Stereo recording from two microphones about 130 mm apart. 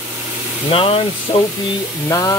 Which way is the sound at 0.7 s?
45° left (ahead or behind).